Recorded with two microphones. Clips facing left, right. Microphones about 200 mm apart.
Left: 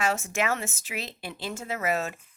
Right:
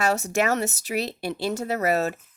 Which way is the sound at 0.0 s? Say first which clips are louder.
Right 5 dB; 40° right (ahead or behind).